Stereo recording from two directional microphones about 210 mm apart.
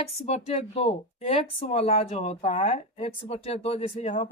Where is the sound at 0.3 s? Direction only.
30° left (ahead or behind).